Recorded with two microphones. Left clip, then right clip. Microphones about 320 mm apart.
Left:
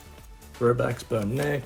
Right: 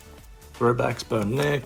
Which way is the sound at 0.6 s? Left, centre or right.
Centre.